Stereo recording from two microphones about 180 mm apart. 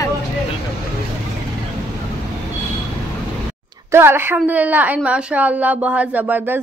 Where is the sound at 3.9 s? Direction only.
15° right (ahead or behind).